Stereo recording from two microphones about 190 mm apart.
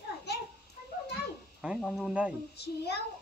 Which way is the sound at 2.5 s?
60° left (ahead or behind).